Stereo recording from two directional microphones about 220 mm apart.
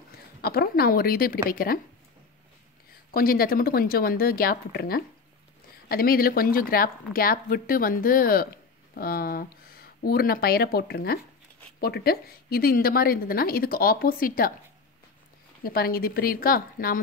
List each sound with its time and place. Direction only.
0.4 s a woman's voice: 45° left (ahead or behind)
3.1 s a woman's voice: 40° left (ahead or behind)
15.6 s a woman's voice: 45° left (ahead or behind)